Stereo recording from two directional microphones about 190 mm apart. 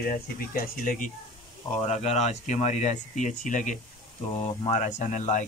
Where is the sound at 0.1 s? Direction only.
45° left (ahead or behind).